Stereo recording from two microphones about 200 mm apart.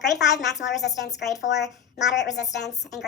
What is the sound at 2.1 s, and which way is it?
Speech, 60° left (ahead or behind).